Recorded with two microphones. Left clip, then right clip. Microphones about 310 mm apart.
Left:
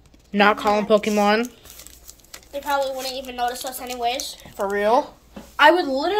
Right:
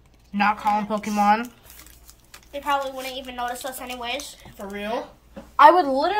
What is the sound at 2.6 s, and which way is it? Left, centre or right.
A woman's voice, right.